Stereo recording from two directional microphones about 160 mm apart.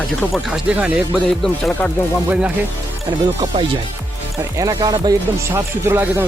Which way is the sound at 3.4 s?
35° right (ahead or behind).